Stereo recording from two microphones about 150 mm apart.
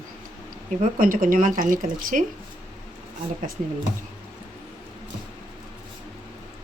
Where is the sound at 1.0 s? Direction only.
65° right (ahead or behind).